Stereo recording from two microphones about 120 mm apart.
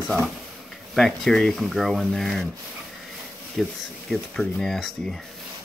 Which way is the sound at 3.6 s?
Centre (ahead or behind).